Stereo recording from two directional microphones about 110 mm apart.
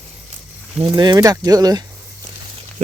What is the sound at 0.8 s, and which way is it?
Speech, 40° right (ahead or behind).